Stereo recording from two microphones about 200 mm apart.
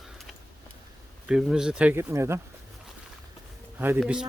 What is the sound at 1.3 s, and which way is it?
Speech, 5° right (ahead or behind).